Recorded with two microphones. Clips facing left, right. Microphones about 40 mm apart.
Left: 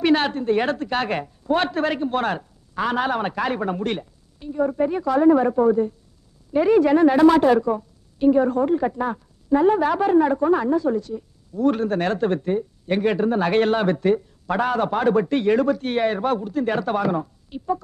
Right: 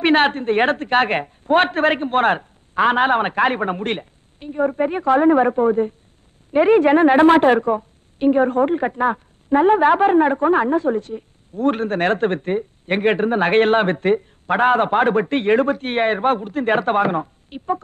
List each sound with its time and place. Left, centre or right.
0.0 s a woman's voice: right